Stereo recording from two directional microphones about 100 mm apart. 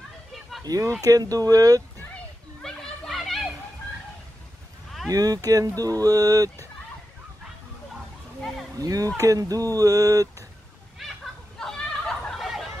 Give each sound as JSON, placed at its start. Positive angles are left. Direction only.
{"t": 0.7, "sound": "speech", "side_deg": -35}
{"t": 2.6, "sound": "children playing", "side_deg": 5}
{"t": 5.1, "sound": "speech", "side_deg": -40}
{"t": 8.7, "sound": "speech", "side_deg": -35}
{"t": 11.5, "sound": "a sound", "side_deg": 5}